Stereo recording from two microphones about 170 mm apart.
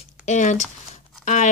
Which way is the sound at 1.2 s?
45° left (ahead or behind).